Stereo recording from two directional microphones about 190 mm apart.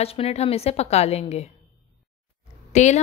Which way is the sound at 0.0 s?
30° left (ahead or behind).